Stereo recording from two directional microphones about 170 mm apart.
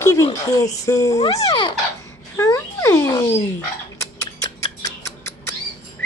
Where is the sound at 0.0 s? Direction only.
20° left (ahead or behind).